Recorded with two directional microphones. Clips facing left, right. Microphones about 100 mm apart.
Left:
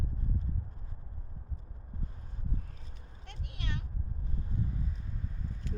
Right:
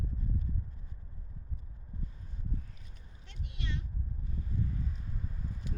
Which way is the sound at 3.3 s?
55° left (ahead or behind).